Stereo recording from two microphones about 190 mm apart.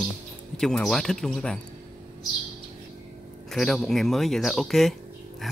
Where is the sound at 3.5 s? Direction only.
Centre (ahead or behind).